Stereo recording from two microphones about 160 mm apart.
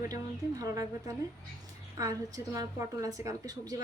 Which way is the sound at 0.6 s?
20° right (ahead or behind).